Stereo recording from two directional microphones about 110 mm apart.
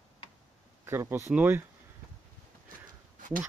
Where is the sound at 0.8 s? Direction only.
25° right (ahead or behind).